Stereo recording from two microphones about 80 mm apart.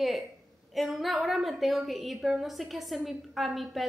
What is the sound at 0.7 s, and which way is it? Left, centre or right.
A woman's voice, centre.